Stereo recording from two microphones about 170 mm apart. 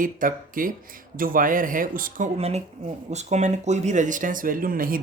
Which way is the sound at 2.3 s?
35° right (ahead or behind).